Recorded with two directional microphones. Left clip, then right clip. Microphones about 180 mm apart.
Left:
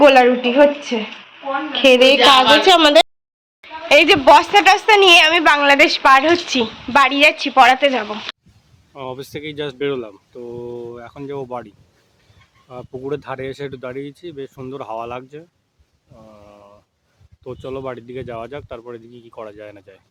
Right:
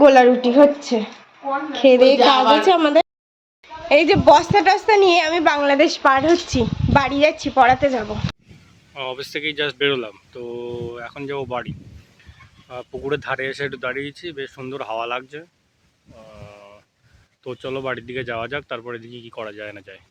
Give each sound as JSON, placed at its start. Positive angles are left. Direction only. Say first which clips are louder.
{"t": 0.0, "sound": "speech", "louder": "left 1 dB", "side_deg": -15}
{"t": 0.9, "sound": "speech", "louder": "right 1 dB", "side_deg": -30}
{"t": 1.7, "sound": "speech", "louder": "left 1 dB", "side_deg": -5}
{"t": 8.9, "sound": "speech", "louder": "right 2 dB", "side_deg": 5}
{"t": 16.1, "sound": "a sound", "louder": "right 2 dB", "side_deg": 0}
{"t": 17.4, "sound": "speech", "louder": "right 1 dB", "side_deg": 5}